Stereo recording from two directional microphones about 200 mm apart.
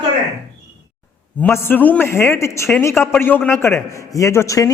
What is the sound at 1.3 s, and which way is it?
A man's voice, 10° left (ahead or behind).